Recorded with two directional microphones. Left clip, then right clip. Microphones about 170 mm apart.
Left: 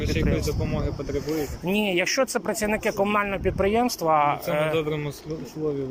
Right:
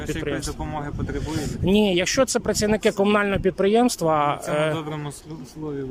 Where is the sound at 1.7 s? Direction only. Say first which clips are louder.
Right 3 dB; 40° right (ahead or behind).